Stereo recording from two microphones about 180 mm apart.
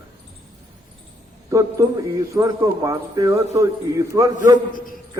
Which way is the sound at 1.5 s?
15° right (ahead or behind).